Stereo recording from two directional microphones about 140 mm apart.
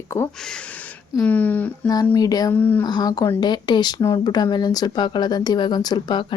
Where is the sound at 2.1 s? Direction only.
25° left (ahead or behind).